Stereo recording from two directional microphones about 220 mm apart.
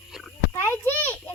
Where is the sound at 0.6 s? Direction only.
10° left (ahead or behind).